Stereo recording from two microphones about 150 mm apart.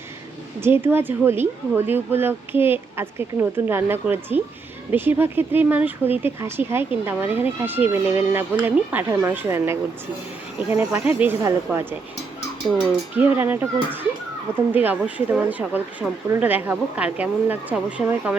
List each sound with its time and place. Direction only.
0.6 s speech: 15° right (ahead or behind)